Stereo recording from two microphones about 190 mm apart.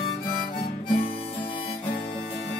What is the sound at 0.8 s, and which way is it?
Harmonica, 25° left (ahead or behind).